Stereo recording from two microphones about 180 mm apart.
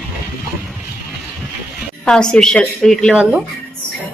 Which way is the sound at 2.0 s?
5° left (ahead or behind).